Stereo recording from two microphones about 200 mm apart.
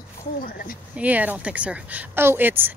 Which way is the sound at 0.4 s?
45° left (ahead or behind).